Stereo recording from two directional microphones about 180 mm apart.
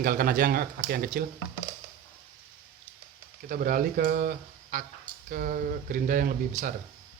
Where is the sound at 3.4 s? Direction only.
50° right (ahead or behind).